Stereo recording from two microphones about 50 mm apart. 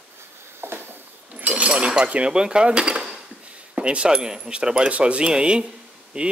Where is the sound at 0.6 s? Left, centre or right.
Right.